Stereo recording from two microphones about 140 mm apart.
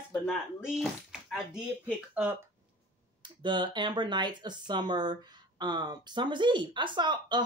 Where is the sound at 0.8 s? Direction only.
Centre (ahead or behind).